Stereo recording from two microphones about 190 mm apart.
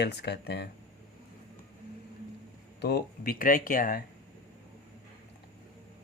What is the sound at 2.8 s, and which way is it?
Speech, 55° left (ahead or behind).